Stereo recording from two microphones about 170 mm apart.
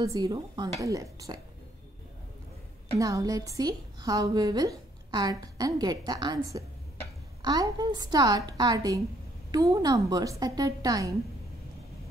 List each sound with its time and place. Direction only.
0.0 s a woman's voice: 25° right (ahead or behind)
3.0 s a woman's voice: 20° right (ahead or behind)